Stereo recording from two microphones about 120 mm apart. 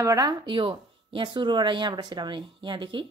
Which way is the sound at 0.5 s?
45° right (ahead or behind).